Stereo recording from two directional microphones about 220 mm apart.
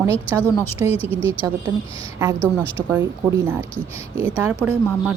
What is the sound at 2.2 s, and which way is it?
A woman's voice, 10° right (ahead or behind).